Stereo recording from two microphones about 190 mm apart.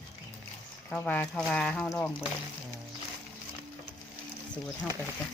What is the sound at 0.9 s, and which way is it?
Speech, 10° left (ahead or behind).